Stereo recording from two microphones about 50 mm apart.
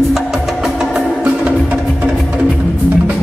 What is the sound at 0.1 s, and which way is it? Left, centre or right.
Music, centre.